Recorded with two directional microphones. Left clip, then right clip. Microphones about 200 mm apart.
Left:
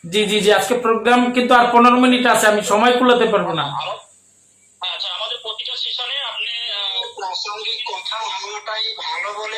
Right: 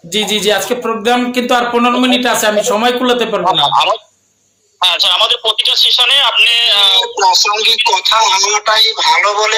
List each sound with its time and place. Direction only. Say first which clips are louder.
0.1 s speech: right 2 dB; 35° right (ahead or behind)